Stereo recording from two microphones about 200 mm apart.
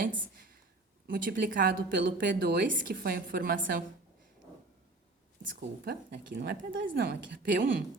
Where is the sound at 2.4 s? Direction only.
50° right (ahead or behind).